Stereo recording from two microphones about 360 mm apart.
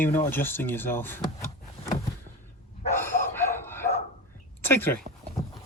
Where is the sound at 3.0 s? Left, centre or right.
Centre.